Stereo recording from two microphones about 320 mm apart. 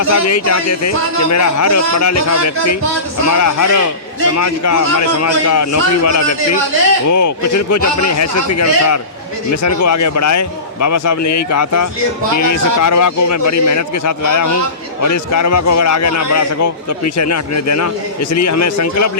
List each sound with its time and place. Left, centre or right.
0.0 s a man's voice: left